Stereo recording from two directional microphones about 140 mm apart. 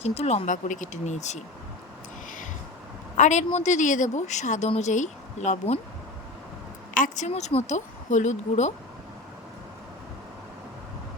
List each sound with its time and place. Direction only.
0.0 s a woman's voice: 50° left (ahead or behind)
3.2 s a woman's voice: 60° left (ahead or behind)
6.9 s a woman's voice: 70° left (ahead or behind)
7.3 s a woman's voice: 50° left (ahead or behind)